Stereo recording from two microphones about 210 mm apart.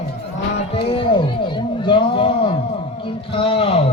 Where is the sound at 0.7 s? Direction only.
25° left (ahead or behind).